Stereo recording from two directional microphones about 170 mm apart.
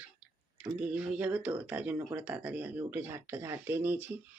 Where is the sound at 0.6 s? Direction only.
5° right (ahead or behind).